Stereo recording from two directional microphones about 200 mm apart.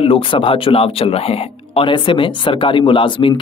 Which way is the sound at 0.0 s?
25° left (ahead or behind).